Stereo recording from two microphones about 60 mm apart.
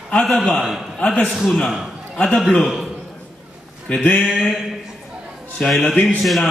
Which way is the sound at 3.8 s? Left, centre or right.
Left.